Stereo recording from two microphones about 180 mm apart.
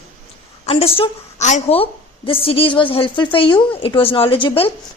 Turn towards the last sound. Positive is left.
turn(degrees=30)  # may be behind; listen again after turning